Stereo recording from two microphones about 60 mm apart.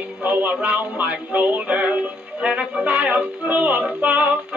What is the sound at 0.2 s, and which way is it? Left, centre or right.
Music, right.